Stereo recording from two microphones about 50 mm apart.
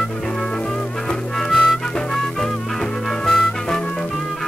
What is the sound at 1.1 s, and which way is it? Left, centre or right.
Music, centre.